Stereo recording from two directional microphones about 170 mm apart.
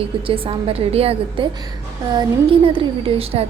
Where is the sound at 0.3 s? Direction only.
30° right (ahead or behind).